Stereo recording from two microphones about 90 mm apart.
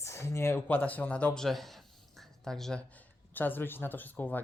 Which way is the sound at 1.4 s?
Centre (ahead or behind).